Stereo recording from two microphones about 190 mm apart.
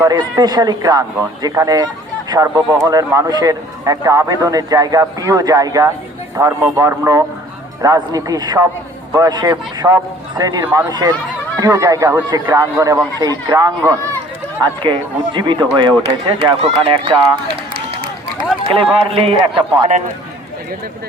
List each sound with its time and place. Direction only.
0.0 s speech: 20° right (ahead or behind)
18.5 s run: centre (ahead or behind)
18.9 s speech: 30° right (ahead or behind)